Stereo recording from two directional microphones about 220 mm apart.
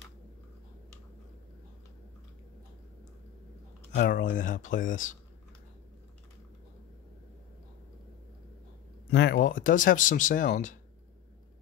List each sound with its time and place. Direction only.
3.9 s speech: 35° left (ahead or behind)
9.1 s speech: 45° left (ahead or behind)